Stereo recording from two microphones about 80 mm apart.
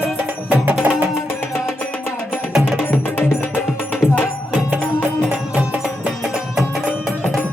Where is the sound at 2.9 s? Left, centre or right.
Left.